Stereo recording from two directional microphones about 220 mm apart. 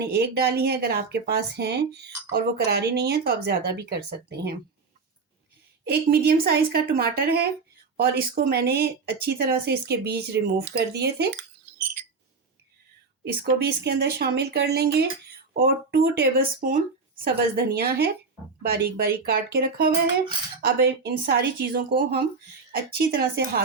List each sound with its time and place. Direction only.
0.0 s speech: 50° right (ahead or behind)
5.8 s speech: 45° right (ahead or behind)
13.2 s speech: 45° right (ahead or behind)